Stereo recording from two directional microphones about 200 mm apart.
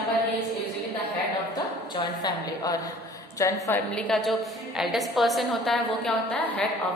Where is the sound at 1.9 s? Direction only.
20° left (ahead or behind).